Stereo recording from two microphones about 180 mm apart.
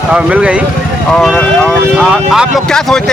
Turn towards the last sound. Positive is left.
turn(degrees=5)  # may be behind; listen again after turning